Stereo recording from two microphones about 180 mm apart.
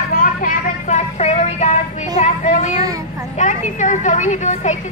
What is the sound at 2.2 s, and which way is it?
Speech, 45° left (ahead or behind).